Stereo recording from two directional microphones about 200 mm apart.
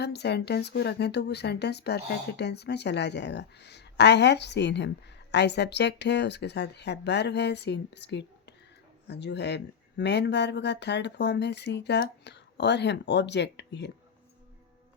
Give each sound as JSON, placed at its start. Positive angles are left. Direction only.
{"t": 0.0, "sound": "speech", "side_deg": 55}